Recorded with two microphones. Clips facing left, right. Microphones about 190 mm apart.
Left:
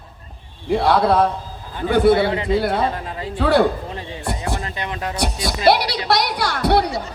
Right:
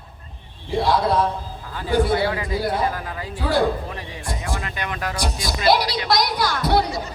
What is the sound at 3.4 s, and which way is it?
Speech, 65° left (ahead or behind).